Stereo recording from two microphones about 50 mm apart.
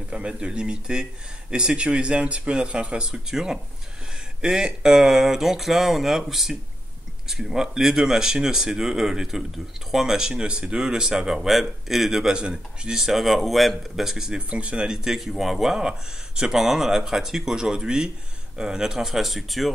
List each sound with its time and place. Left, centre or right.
0.1 s speech: right
4.5 s speech: centre
12.9 s speech: centre
15.1 s speech: centre